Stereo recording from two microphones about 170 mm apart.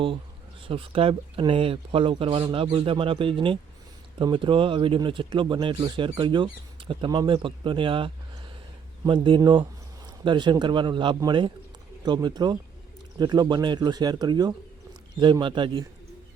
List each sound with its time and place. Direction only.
0.7 s speech: 30° right (ahead or behind)